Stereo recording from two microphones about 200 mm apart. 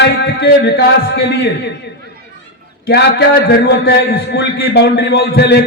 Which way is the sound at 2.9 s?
55° left (ahead or behind).